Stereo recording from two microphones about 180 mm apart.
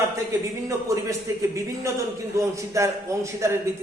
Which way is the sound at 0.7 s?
15° right (ahead or behind).